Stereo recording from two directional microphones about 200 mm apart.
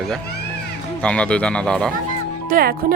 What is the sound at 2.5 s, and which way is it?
Speech, 45° right (ahead or behind).